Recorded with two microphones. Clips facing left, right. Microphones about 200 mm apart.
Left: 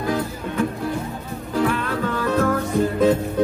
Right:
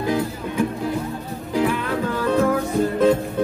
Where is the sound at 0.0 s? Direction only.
20° right (ahead or behind).